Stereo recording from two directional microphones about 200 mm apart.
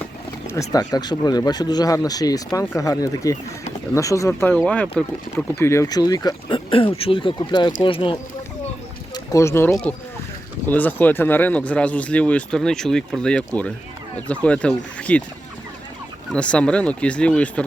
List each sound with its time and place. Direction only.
0.4 s speech: 15° left (ahead or behind)
9.1 s speech: 15° left (ahead or behind)
16.3 s speech: 5° left (ahead or behind)